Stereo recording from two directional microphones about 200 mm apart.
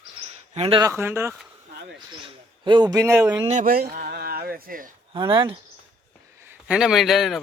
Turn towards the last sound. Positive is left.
turn(degrees=0)  # may be behind; listen again after turning